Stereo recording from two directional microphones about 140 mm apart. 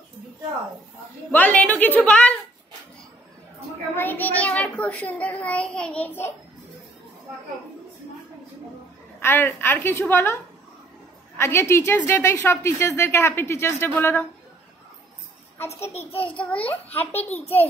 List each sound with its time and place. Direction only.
1.3 s a woman's voice: 10° left (ahead or behind)
3.9 s a woman's voice: 15° left (ahead or behind)
9.2 s a woman's voice: 15° left (ahead or behind)
15.6 s a child's voice: 50° left (ahead or behind)
16.5 s a woman's voice: 10° left (ahead or behind)
17.1 s a child's voice: 50° left (ahead or behind)